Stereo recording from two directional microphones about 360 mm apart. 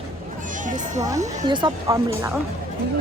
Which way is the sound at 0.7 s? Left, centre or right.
Right.